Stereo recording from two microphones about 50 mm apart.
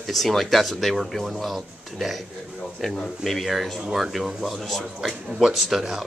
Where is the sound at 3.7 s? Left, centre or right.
Centre.